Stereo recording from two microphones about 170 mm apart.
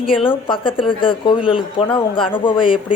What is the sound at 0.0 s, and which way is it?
Speech, 30° left (ahead or behind).